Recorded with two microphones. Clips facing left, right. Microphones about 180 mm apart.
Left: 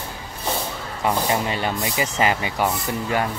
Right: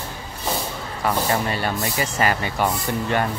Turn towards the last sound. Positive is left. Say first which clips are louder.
# right 1 dB
turn(degrees=5)  # may be behind; listen again after turning